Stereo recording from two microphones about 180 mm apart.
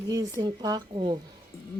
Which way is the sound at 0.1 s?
20° right (ahead or behind).